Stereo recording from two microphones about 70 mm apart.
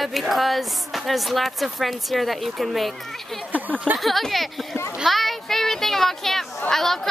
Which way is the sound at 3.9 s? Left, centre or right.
Centre.